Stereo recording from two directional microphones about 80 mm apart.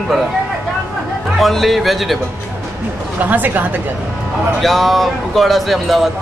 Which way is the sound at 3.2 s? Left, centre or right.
Right.